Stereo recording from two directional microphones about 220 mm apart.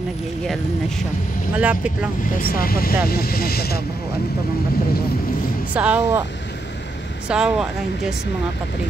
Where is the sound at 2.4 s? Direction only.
40° left (ahead or behind).